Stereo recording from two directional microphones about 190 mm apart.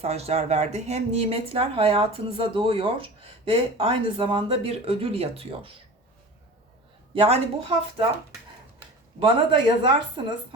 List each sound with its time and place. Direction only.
0.0 s a woman's voice: 35° right (ahead or behind)
7.1 s speech: 30° right (ahead or behind)
9.2 s a woman's voice: 25° right (ahead or behind)